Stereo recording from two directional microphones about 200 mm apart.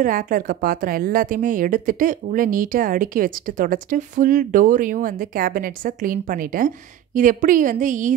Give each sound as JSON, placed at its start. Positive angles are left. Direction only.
{"t": 0.0, "sound": "a woman's voice", "side_deg": -45}